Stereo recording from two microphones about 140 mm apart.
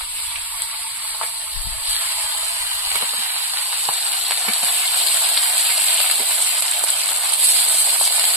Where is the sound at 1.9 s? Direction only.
10° right (ahead or behind).